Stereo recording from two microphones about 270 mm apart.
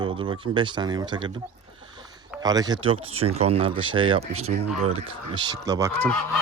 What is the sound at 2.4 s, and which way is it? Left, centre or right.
Speech, centre.